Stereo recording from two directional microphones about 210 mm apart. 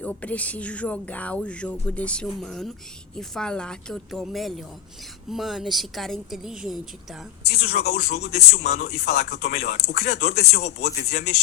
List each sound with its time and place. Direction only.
0.0 s speech: 5° left (ahead or behind)
7.5 s speech: 50° left (ahead or behind)